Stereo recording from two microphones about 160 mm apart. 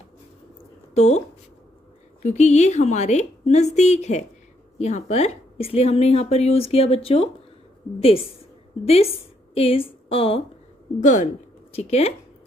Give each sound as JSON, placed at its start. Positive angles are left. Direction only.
{"t": 0.9, "sound": "a woman's voice", "side_deg": 45}
{"t": 2.2, "sound": "a woman's voice", "side_deg": 45}
{"t": 11.0, "sound": "a woman's voice", "side_deg": 50}